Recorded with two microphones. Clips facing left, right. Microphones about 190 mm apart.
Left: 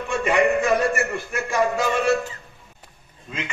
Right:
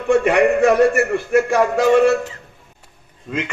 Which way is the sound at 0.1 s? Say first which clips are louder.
Right 6 dB; 60° right (ahead or behind).